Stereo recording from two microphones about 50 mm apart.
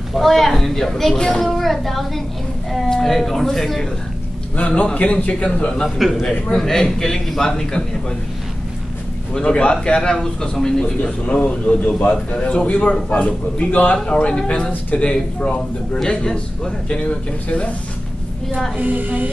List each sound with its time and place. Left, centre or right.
0.1 s a man's voice: centre
1.4 s a man's voice: centre
4.6 s a man's voice: left
5.9 s speech: centre
6.6 s a man's voice: centre
9.3 s a man's voice: centre
11.3 s a man's voice: left
14.0 s a man's voice: centre
18.8 s speech: right